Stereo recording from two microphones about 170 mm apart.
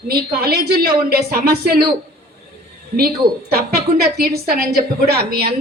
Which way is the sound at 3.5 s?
65° right (ahead or behind).